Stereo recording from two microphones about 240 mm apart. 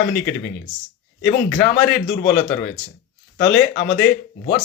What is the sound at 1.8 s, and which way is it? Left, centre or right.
Speech, left.